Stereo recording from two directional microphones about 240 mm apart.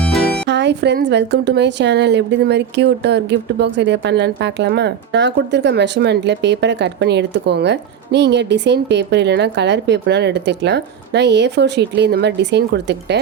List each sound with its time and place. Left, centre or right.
0.0 s music: centre
0.4 s a woman's voice: right